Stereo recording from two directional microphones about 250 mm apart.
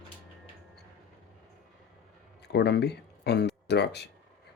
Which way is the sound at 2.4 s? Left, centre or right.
Left.